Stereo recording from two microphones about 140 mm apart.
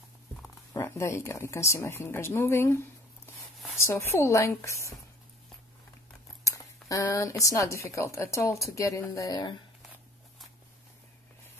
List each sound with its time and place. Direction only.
0.7 s speech: 20° left (ahead or behind)
6.4 s speech: 25° left (ahead or behind)